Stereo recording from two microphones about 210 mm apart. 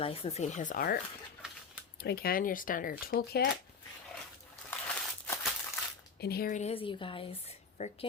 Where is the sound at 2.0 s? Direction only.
45° left (ahead or behind).